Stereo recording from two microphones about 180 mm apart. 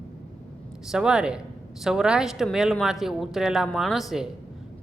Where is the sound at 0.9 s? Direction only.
5° right (ahead or behind).